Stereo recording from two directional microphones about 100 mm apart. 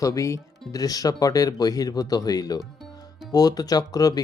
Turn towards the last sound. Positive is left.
turn(degrees=40)  # may be behind; listen again after turning